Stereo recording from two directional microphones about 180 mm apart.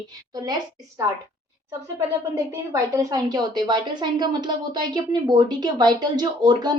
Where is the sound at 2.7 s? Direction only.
20° right (ahead or behind).